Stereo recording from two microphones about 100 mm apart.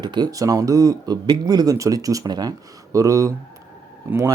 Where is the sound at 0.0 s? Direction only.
45° right (ahead or behind).